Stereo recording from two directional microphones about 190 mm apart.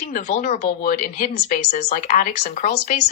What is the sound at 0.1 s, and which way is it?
Speech, 40° left (ahead or behind).